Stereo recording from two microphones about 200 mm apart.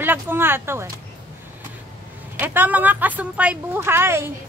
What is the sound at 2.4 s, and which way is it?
Speech, 10° right (ahead or behind).